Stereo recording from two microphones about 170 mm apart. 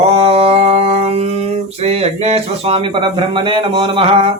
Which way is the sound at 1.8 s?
40° right (ahead or behind).